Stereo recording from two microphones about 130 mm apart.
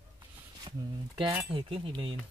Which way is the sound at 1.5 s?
45° right (ahead or behind).